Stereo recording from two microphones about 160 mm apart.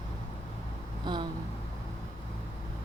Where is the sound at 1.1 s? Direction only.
30° right (ahead or behind).